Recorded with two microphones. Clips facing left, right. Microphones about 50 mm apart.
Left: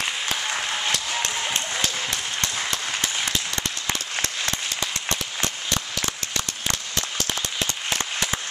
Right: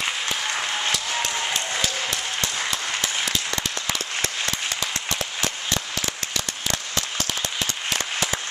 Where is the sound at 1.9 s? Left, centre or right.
Centre.